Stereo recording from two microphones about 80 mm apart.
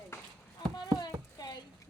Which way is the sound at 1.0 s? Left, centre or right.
Left.